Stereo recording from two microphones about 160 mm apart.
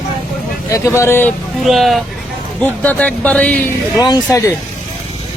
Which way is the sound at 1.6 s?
Centre (ahead or behind).